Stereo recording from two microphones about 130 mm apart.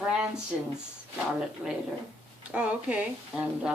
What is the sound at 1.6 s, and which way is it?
A woman's voice, 5° right (ahead or behind).